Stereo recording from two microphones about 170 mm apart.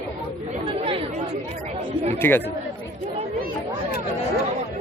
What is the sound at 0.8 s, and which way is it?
Chatter, 35° right (ahead or behind).